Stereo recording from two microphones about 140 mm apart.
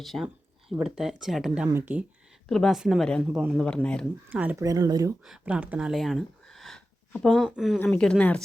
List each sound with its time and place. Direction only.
0.0 s speech: centre (ahead or behind)
2.5 s speech: centre (ahead or behind)
4.3 s speech: 10° right (ahead or behind)
4.5 s speech: 25° right (ahead or behind)
5.2 s speech: 5° right (ahead or behind)
7.4 s speech: 5° right (ahead or behind)